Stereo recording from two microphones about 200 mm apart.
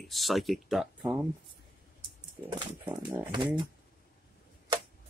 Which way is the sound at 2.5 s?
20° right (ahead or behind).